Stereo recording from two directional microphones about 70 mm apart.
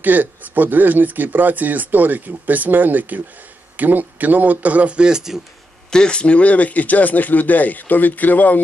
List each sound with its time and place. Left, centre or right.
0.0 s speech: right; by 5.4 s centre
5.9 s speech: centre